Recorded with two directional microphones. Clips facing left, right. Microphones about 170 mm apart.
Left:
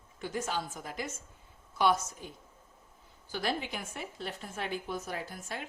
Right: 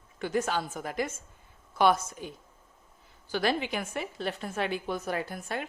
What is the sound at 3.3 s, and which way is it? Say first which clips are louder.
A woman's voice: right 6 dB; 80° right.